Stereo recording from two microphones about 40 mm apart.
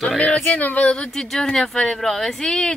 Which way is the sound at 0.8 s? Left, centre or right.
Left.